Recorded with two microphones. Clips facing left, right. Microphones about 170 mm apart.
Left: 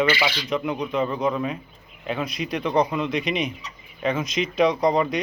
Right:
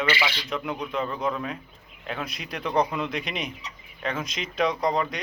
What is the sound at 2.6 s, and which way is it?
Speech, 10° left (ahead or behind).